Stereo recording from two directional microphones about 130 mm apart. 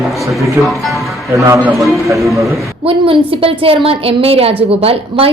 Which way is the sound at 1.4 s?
25° right (ahead or behind).